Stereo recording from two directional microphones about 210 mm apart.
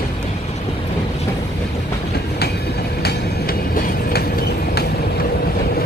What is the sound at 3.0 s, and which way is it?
Train, 45° left (ahead or behind).